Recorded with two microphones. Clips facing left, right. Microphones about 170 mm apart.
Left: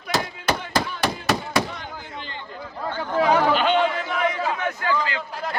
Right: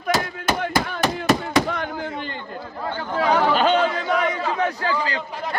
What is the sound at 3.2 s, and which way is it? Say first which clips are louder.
Chatter: left 1 dB; 10° left (ahead or behind).